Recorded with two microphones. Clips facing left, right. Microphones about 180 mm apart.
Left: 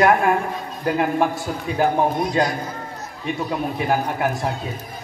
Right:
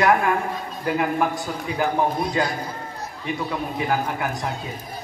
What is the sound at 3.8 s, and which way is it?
Speech, 25° left (ahead or behind).